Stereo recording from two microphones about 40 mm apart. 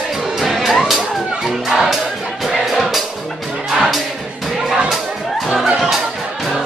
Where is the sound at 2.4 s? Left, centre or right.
Centre.